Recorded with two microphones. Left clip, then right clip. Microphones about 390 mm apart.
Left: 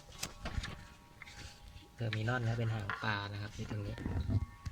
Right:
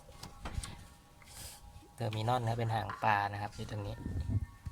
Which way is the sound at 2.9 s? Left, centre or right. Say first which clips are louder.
Right 7 dB; centre.